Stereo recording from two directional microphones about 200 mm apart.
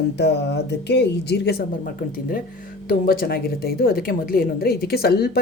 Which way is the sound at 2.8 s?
45° left (ahead or behind).